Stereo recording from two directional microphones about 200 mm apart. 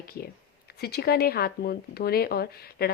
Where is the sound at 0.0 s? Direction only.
50° left (ahead or behind).